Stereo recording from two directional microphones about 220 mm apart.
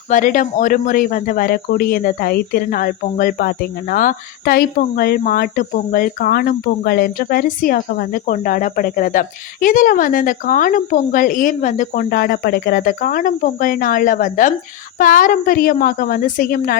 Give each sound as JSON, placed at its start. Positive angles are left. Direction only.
{"t": 0.1, "sound": "speech", "side_deg": 35}